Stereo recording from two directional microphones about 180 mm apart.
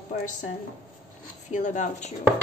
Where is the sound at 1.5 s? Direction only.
45° left (ahead or behind).